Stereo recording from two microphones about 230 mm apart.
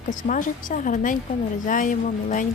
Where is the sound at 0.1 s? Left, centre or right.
Left.